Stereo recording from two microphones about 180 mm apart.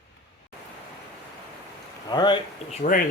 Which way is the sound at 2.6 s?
45° left (ahead or behind).